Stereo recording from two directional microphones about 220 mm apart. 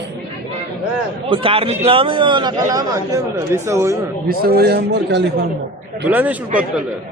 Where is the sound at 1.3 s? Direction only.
25° right (ahead or behind).